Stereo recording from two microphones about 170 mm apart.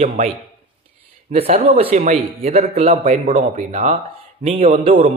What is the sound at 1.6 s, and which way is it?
A man's voice, 35° right (ahead or behind).